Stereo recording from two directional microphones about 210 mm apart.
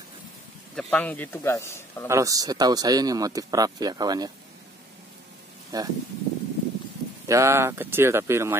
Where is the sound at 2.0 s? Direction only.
15° right (ahead or behind).